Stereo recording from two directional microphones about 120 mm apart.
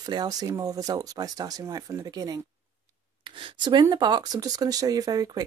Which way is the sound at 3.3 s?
45° right (ahead or behind).